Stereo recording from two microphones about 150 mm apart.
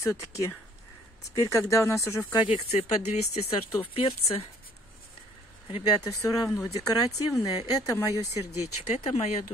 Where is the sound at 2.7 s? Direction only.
45° left (ahead or behind).